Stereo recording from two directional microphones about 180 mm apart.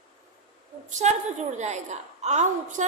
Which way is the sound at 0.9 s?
40° right (ahead or behind).